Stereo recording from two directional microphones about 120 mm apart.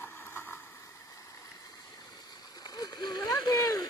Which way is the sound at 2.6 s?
35° left (ahead or behind).